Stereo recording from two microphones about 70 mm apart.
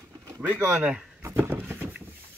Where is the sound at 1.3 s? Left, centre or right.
Right.